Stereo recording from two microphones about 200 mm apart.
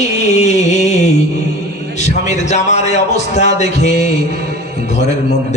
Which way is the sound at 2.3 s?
35° left (ahead or behind).